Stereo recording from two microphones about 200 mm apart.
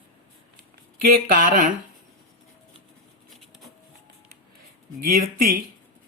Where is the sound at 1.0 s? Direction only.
45° right (ahead or behind).